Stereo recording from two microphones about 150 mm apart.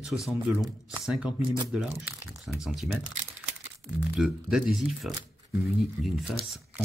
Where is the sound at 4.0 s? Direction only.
5° right (ahead or behind).